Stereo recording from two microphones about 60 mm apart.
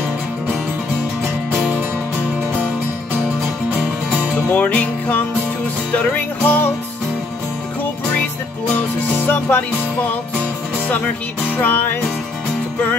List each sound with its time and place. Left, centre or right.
4.5 s music: left
9.2 s music: left
11.5 s music: left